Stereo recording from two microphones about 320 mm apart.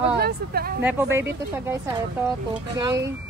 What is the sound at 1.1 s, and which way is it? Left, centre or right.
Speech, centre.